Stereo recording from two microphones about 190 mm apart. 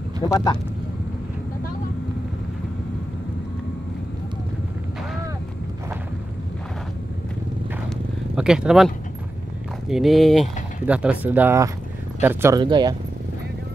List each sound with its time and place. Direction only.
0.2 s speech: 20° left (ahead or behind)
8.4 s speech: 5° right (ahead or behind); by 12.9 s 20° right (ahead or behind)